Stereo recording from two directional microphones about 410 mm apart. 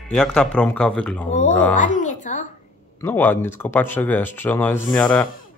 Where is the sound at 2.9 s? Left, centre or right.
Centre.